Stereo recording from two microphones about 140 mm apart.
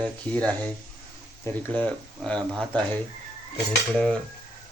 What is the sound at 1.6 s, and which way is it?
Speech, 10° left (ahead or behind).